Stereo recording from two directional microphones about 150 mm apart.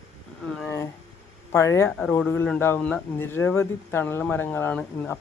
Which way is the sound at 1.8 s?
10° left (ahead or behind).